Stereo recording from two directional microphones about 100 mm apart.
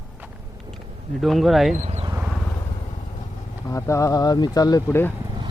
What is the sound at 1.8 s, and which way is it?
Vehicle, 90° right.